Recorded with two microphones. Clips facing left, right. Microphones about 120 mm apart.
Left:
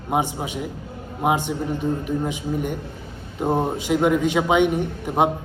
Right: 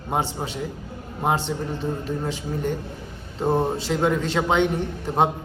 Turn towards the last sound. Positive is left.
turn(degrees=15)  # may be behind; listen again after turning